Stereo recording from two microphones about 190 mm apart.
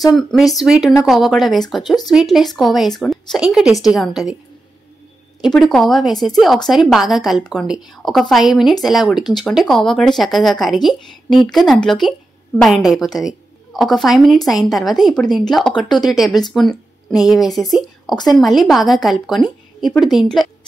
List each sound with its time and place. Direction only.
0.1 s a woman's voice: centre (ahead or behind)
5.4 s a woman's voice: centre (ahead or behind)
18.1 s a woman's voice: 20° left (ahead or behind)
18.4 s a woman's voice: centre (ahead or behind)